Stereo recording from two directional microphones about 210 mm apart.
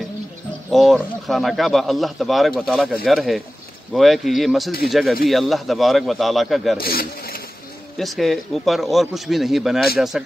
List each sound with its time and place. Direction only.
0.7 s speech: centre (ahead or behind)
6.8 s speech: 45° left (ahead or behind)
8.0 s speech: centre (ahead or behind)